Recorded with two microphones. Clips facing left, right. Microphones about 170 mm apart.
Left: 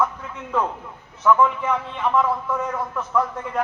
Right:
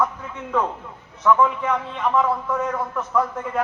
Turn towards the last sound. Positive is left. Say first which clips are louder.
# right 1 dB
turn(degrees=0)  # may be behind; listen again after turning